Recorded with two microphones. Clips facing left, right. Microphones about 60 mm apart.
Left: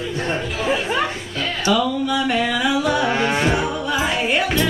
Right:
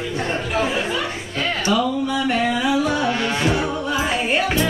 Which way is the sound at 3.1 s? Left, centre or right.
Left.